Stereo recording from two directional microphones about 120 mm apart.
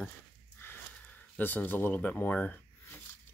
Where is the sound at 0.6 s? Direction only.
15° left (ahead or behind).